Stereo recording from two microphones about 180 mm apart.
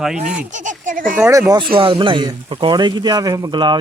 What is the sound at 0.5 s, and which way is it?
Speech, 45° right (ahead or behind).